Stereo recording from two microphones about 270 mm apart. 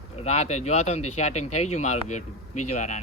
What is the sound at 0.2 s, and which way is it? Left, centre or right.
Speech, left.